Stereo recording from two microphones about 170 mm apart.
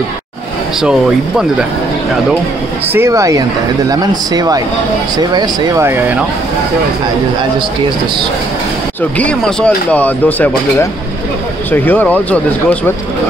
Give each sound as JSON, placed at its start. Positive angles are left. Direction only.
{"t": 0.7, "sound": "speech", "side_deg": -5}
{"t": 2.9, "sound": "speech", "side_deg": -15}
{"t": 9.2, "sound": "speech", "side_deg": 5}